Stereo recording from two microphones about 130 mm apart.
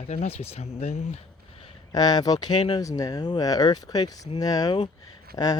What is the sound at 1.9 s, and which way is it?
Speech, 30° left (ahead or behind).